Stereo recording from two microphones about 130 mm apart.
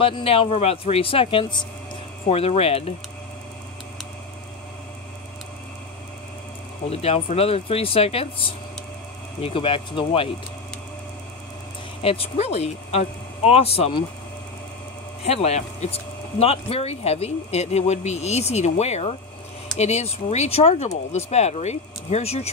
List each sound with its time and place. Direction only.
0.0 s speech: 45° left (ahead or behind)
6.9 s speech: 50° left (ahead or behind)
12.0 s speech: 50° left (ahead or behind)
15.2 s speech: 55° left (ahead or behind)